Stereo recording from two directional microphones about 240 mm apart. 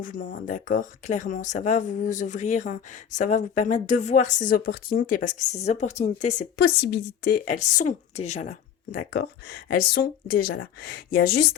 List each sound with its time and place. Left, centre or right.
0.0 s speech: left
6.6 s speech: left